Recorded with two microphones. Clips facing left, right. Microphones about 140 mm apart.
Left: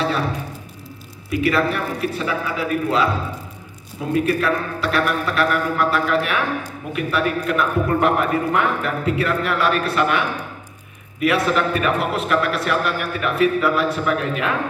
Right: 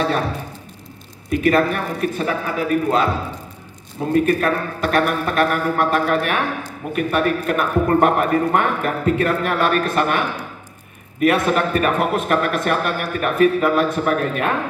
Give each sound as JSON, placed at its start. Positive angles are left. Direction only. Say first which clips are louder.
{"t": 1.3, "sound": "a man's voice", "louder": "right 3 dB", "side_deg": -45}
{"t": 4.1, "sound": "a man's voice", "louder": "right 2 dB", "side_deg": -45}